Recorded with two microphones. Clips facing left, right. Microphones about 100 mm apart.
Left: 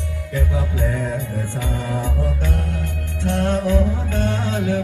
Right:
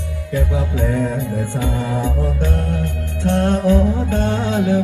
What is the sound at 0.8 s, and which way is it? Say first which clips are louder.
Music: right 4 dB; 45° right (ahead or behind).